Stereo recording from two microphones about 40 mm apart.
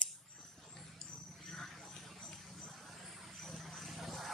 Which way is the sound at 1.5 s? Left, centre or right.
Centre.